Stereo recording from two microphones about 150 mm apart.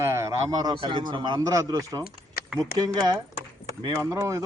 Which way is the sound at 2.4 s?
90° left.